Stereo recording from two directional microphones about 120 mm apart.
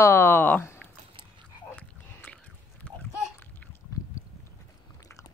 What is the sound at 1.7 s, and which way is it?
Biting, 15° left (ahead or behind).